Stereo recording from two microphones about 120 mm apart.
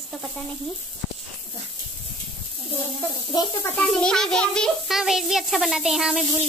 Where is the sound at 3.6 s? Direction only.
10° left (ahead or behind).